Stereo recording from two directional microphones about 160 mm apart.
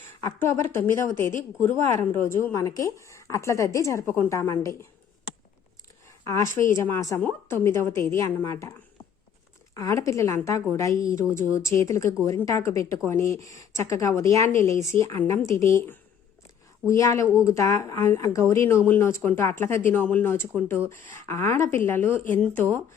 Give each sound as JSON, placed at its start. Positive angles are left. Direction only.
{"t": 0.2, "sound": "a woman's voice", "side_deg": 15}
{"t": 6.1, "sound": "a sound", "side_deg": 20}
{"t": 6.7, "sound": "a woman's voice", "side_deg": 20}
{"t": 9.7, "sound": "a woman's voice", "side_deg": 20}